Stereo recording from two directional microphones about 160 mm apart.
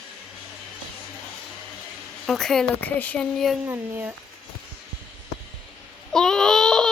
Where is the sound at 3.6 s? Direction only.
10° right (ahead or behind).